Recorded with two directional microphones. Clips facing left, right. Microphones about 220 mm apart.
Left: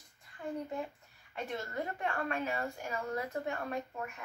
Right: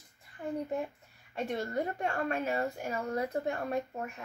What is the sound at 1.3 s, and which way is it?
A woman's voice, 35° right (ahead or behind).